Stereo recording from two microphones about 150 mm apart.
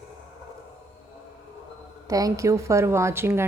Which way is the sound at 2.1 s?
25° right (ahead or behind).